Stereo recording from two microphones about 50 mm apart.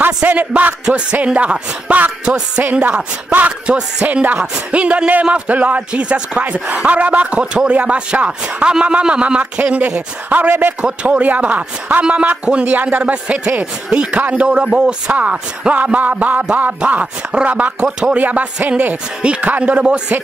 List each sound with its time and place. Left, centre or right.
0.2 s a man's voice: right
2.2 s a man's voice: centre
2.6 s a man's voice: right
10.8 s a man's voice: right
15.7 s a man's voice: right
17.0 s speech: centre
17.5 s a man's voice: right